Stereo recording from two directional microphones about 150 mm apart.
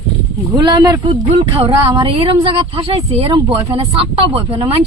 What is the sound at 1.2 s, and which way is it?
Speech, 45° right (ahead or behind).